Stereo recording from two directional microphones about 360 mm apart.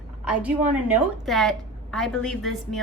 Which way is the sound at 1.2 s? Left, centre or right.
Centre.